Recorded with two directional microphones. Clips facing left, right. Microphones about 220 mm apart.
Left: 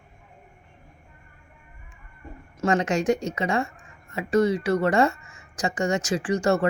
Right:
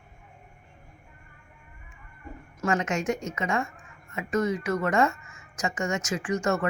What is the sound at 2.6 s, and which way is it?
A woman's voice, 35° left (ahead or behind).